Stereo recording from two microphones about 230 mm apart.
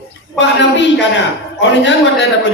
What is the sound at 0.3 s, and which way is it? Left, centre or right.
Speech, left.